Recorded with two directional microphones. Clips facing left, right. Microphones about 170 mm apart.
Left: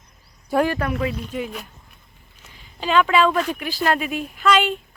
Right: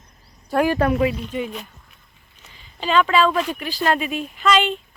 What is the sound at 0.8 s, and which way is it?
Speech, 30° right (ahead or behind).